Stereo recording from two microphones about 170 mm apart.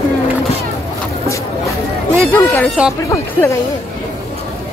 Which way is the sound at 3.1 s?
15° left (ahead or behind).